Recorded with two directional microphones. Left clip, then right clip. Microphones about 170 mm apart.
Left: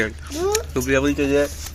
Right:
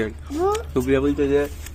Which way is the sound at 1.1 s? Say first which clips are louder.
Left 1 dB; 20° left (ahead or behind).